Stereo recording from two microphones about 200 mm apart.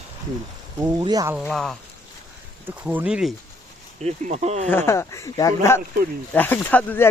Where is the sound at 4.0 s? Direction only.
35° right (ahead or behind).